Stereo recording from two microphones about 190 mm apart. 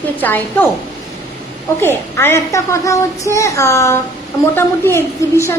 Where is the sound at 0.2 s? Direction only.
10° left (ahead or behind).